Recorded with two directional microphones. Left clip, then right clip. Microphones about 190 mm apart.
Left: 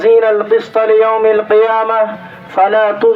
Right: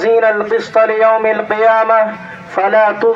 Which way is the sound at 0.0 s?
30° left (ahead or behind).